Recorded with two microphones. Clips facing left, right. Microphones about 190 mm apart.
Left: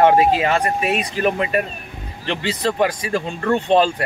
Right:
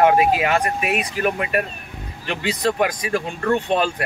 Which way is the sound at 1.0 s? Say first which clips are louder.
Left 2 dB; 10° right (ahead or behind).